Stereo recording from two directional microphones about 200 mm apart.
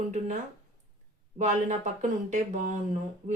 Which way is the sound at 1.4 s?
35° right (ahead or behind).